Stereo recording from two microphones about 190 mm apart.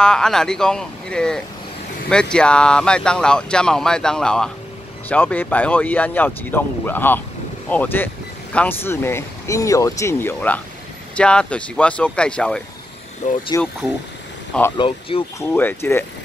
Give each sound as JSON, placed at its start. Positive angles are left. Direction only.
{"t": 0.0, "sound": "speech", "side_deg": 5}
{"t": 13.2, "sound": "speech", "side_deg": 40}
{"t": 14.8, "sound": "speech", "side_deg": 30}
{"t": 15.3, "sound": "speech", "side_deg": 10}